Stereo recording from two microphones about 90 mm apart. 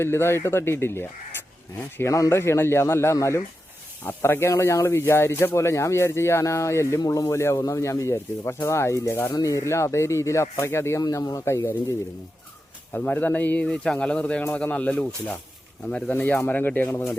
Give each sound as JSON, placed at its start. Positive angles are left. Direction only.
{"t": 0.0, "sound": "speech", "side_deg": 30}
{"t": 9.3, "sound": "speech", "side_deg": 40}
{"t": 11.0, "sound": "speech", "side_deg": 45}
{"t": 11.4, "sound": "speech", "side_deg": 30}
{"t": 12.9, "sound": "speech", "side_deg": 20}